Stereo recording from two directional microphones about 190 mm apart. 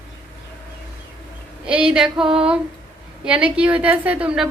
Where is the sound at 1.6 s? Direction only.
5° right (ahead or behind).